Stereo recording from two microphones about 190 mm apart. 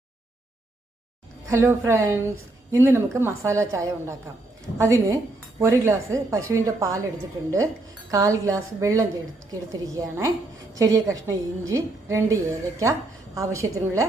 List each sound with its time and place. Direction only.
1.5 s a woman's voice: 15° right (ahead or behind)
8.1 s a woman's voice: 15° right (ahead or behind)